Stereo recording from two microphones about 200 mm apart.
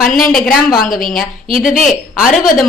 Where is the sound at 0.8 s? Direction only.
45° left (ahead or behind).